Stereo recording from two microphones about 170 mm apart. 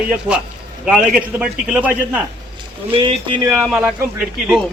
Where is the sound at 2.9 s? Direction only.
30° right (ahead or behind).